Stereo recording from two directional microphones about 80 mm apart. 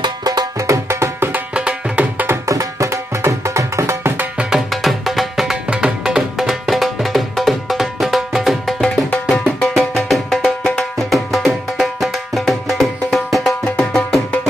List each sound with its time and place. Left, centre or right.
0.0 s music: right
1.3 s music: centre
2.4 s music: right
4.2 s music: centre
4.6 s music: centre